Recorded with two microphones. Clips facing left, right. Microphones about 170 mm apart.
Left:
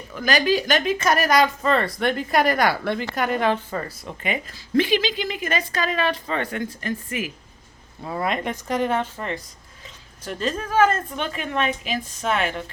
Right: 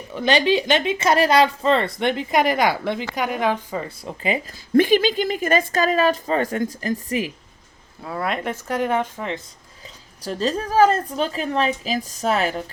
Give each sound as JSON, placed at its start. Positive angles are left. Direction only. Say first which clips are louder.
{"t": 0.1, "sound": "a woman's voice", "louder": "right 2 dB", "side_deg": -30}
{"t": 4.0, "sound": "speech", "louder": "right 4 dB", "side_deg": -30}
{"t": 4.8, "sound": "speech", "louder": "right 4 dB", "side_deg": -45}
{"t": 8.0, "sound": "speech", "louder": "even", "side_deg": 0}
{"t": 10.2, "sound": "speech", "louder": "right 3 dB", "side_deg": -35}